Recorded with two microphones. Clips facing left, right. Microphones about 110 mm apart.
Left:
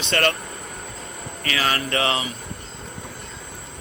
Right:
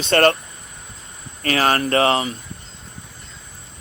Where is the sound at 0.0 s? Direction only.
40° right (ahead or behind).